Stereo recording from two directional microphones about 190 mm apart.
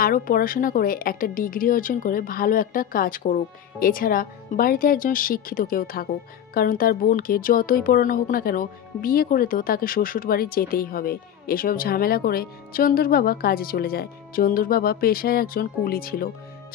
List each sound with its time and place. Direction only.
0.0 s speech: 50° left (ahead or behind)